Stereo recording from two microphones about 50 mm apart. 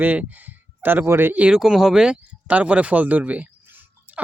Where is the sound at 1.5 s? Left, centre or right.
Centre.